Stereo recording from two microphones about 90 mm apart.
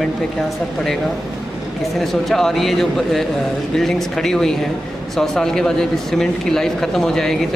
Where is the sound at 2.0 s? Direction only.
5° left (ahead or behind).